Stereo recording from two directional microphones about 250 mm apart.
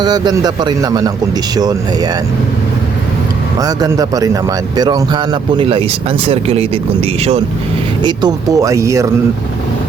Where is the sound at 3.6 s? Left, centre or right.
Centre.